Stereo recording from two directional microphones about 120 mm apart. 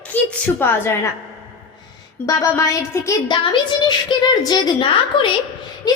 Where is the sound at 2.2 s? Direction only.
30° left (ahead or behind).